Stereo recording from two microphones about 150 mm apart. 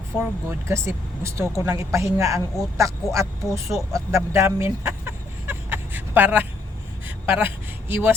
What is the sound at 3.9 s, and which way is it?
Chicken, 20° right (ahead or behind).